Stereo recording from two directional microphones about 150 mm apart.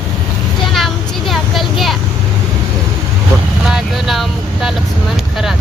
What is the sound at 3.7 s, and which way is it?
Vehicle, centre (ahead or behind).